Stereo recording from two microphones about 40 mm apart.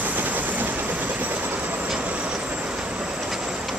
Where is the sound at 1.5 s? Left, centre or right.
Right.